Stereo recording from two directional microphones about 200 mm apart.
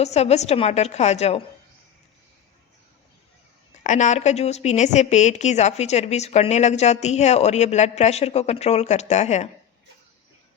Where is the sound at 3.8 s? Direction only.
35° left (ahead or behind).